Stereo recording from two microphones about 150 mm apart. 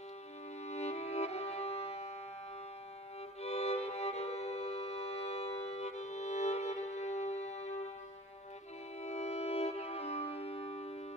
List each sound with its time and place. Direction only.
0.7 s music: 45° left (ahead or behind)
3.4 s music: 45° left (ahead or behind)
9.0 s music: 45° left (ahead or behind)